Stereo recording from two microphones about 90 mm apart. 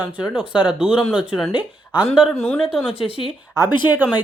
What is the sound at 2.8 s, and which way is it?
Speech, 75° left (ahead or behind).